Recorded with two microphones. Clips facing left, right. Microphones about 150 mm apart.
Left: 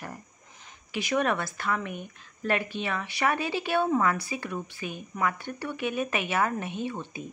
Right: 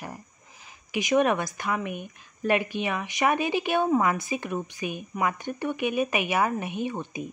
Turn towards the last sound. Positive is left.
turn(degrees=-15)  # may be behind; listen again after turning